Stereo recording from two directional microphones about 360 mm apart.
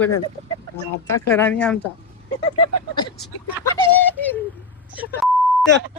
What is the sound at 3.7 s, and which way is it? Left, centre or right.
Bird, centre.